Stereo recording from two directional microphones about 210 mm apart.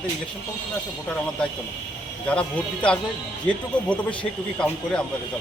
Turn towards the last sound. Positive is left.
turn(degrees=5)  # may be behind; listen again after turning